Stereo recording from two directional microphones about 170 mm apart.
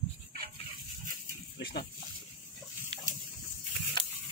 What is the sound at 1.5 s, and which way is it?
Pig, 65° left (ahead or behind).